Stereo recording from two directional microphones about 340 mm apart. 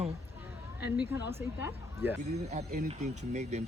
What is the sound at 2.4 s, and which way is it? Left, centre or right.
Speech, right.